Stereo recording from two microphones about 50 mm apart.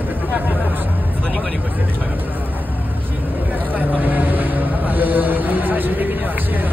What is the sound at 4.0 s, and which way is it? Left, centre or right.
Speech, right.